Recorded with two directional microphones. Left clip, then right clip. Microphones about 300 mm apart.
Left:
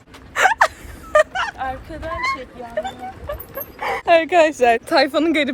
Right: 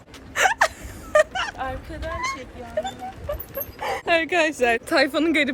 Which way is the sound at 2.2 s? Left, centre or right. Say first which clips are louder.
Left 8 dB; left.